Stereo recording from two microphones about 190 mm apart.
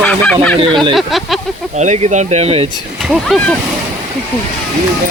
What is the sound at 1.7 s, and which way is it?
Speech, 35° right (ahead or behind).